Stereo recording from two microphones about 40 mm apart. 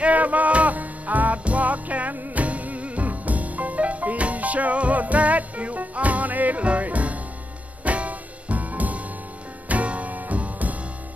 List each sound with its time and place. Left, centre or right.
0.0 s music: right
2.1 s music: right
2.4 s music: right